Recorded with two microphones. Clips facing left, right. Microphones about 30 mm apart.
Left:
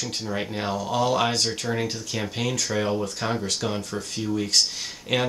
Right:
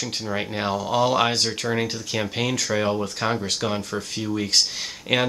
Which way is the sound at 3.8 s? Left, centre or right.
Right.